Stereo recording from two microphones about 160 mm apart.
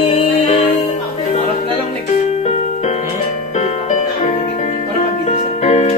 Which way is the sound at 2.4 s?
40° left (ahead or behind).